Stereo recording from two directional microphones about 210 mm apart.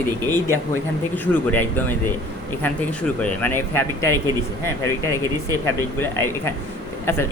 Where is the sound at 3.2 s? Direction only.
10° left (ahead or behind).